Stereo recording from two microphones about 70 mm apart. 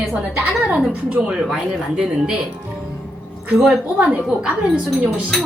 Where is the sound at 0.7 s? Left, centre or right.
Centre.